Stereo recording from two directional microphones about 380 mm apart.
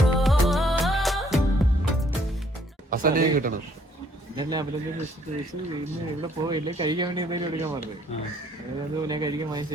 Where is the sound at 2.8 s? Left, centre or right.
Right.